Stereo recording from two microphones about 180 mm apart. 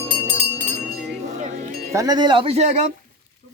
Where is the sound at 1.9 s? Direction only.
20° right (ahead or behind); by 2.9 s 40° right (ahead or behind).